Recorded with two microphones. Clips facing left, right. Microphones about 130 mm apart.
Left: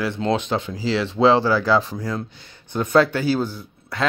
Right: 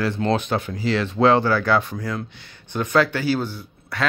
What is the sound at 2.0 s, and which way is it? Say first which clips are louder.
Speech: left 1 dB; 30° left (ahead or behind).